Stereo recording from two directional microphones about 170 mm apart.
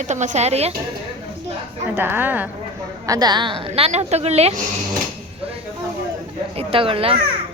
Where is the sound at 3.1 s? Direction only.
25° right (ahead or behind).